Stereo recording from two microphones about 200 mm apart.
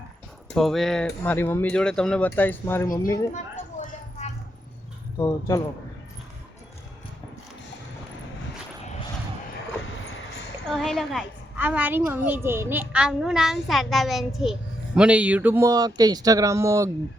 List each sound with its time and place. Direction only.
0.5 s a woman's voice: centre (ahead or behind)
3.3 s a sound: 40° left (ahead or behind)
5.1 s speech: 15° left (ahead or behind)
10.7 s a woman's voice: centre (ahead or behind); by 16.9 s 15° right (ahead or behind)